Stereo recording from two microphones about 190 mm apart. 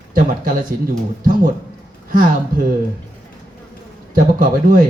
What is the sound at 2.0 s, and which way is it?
Speech, 45° right (ahead or behind).